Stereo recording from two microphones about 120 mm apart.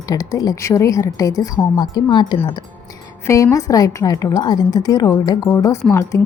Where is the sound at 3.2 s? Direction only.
25° left (ahead or behind).